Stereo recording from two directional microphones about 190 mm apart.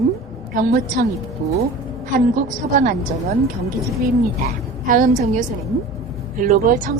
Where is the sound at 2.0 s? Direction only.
45° right (ahead or behind).